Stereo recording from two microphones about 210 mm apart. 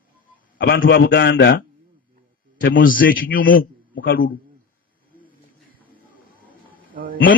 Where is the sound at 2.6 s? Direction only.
40° left (ahead or behind).